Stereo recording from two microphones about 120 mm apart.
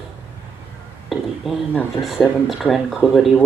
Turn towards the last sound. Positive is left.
turn(degrees=0)  # may be behind; listen again after turning